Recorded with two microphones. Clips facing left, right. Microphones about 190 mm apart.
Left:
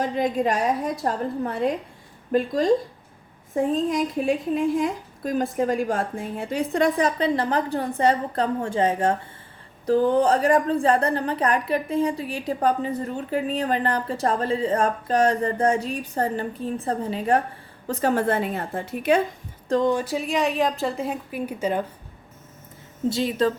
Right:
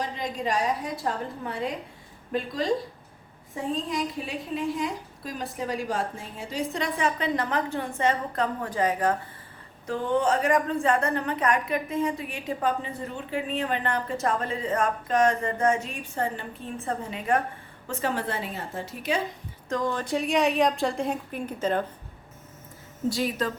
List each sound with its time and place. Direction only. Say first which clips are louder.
0.0 s a woman's voice: left 8 dB; 55° left (ahead or behind)
3.5 s a woman's voice: left 7 dB; 50° left (ahead or behind)
7.0 s a woman's voice: left 5 dB; 35° left (ahead or behind); by 19.2 s 55° left (ahead or behind)
19.6 s speech: left 7 dB; 30° left (ahead or behind)
19.9 s a woman's voice: left 2 dB; 10° left (ahead or behind)
23.0 s a woman's voice: left 5 dB; 25° left (ahead or behind)